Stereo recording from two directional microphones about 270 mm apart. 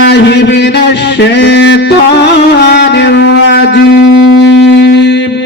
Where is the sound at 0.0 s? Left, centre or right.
Left.